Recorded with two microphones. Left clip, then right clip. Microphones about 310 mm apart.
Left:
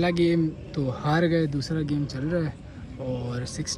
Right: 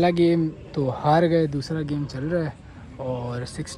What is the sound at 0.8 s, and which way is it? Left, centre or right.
Speech, right.